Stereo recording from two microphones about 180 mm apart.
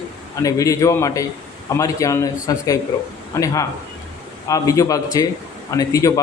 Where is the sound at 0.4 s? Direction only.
20° left (ahead or behind).